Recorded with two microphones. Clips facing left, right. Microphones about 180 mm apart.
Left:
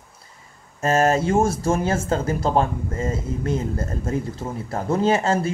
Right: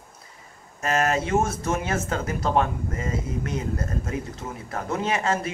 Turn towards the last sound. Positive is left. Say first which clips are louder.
# left 6 dB
turn(degrees=30)  # may be behind; listen again after turning